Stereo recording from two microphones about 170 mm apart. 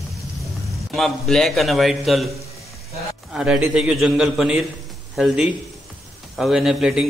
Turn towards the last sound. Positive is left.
turn(degrees=-5)  # may be behind; listen again after turning